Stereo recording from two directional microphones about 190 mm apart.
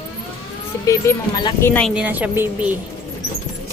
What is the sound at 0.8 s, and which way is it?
Speech, 15° left (ahead or behind).